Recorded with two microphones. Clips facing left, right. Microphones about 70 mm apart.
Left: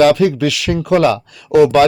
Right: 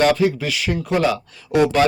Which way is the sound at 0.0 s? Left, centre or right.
Left.